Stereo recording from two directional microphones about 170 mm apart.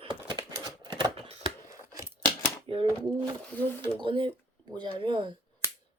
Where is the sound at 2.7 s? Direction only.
30° right (ahead or behind).